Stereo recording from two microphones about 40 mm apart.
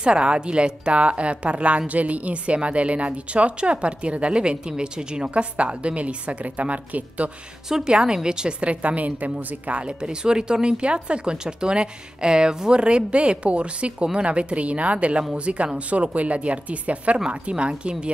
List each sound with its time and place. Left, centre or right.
0.0 s a woman's voice: right
7.7 s a woman's voice: right